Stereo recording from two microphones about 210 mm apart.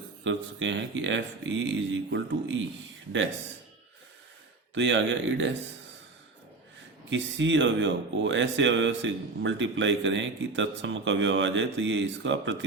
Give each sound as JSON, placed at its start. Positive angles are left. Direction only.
{"t": 0.3, "sound": "speech", "side_deg": -60}
{"t": 4.7, "sound": "speech", "side_deg": -60}
{"t": 7.1, "sound": "speech", "side_deg": -60}